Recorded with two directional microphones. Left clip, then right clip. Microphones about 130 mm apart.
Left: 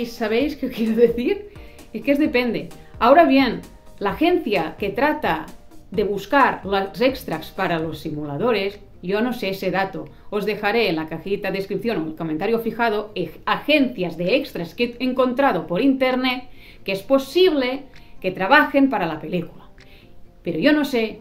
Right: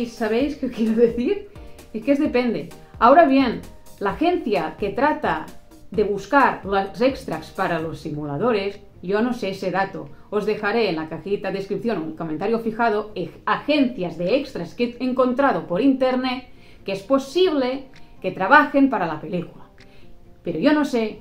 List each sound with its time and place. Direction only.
0.0 s speech: 20° left (ahead or behind)
20.4 s speech: 15° left (ahead or behind)